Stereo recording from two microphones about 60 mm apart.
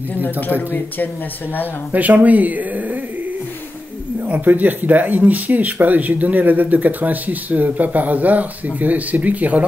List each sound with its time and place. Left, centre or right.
0.1 s speech: left
1.9 s speech: right
4.2 s speech: right